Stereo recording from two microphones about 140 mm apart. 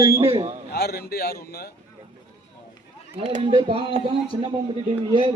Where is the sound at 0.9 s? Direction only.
90° left.